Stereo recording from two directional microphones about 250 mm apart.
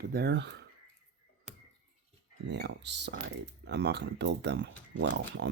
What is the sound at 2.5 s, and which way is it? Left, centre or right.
Speech, right.